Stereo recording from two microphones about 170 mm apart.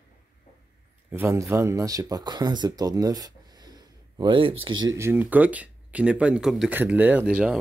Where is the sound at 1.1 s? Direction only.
15° right (ahead or behind); by 4.9 s 30° right (ahead or behind).